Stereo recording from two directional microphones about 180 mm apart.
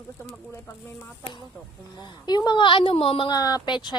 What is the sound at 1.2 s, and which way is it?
Speech, 25° left (ahead or behind).